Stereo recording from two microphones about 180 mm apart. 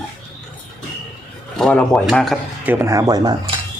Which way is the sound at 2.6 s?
15° right (ahead or behind).